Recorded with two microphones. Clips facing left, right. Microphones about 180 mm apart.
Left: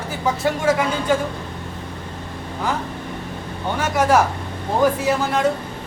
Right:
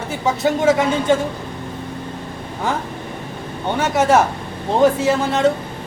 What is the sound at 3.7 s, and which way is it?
Speech, 20° right (ahead or behind).